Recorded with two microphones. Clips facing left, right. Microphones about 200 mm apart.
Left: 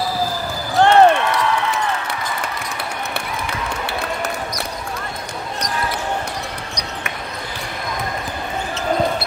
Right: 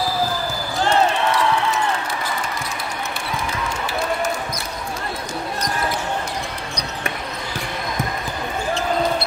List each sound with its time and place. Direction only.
0.7 s basketball bounce: 65° left (ahead or behind)